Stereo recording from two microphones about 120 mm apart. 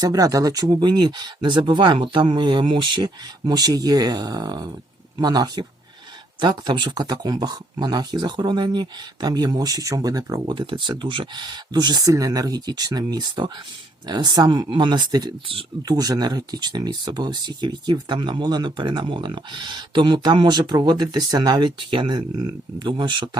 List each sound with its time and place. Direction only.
0.0 s speech: 30° right (ahead or behind)
10.5 s speech: 40° right (ahead or behind)